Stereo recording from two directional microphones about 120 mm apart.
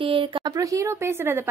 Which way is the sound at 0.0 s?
45° right (ahead or behind).